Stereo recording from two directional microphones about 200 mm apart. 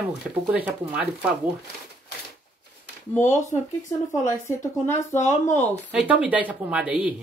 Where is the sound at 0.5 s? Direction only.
5° right (ahead or behind).